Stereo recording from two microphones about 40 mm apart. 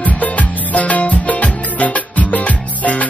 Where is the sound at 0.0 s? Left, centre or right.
Left.